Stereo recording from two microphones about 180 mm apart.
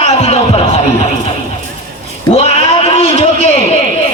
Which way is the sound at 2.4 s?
35° left (ahead or behind).